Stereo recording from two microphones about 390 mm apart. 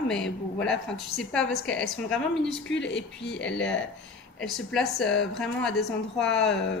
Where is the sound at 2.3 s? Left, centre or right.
Left.